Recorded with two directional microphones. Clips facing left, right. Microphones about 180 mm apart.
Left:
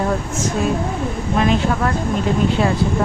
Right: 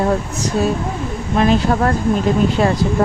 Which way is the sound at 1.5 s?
40° right (ahead or behind).